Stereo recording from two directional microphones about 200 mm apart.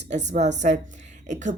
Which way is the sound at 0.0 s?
35° right (ahead or behind).